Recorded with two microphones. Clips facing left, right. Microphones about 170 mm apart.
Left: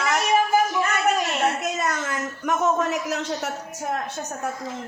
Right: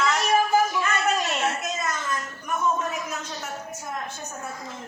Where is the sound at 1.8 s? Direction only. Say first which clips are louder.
Left 3 dB; 75° left (ahead or behind).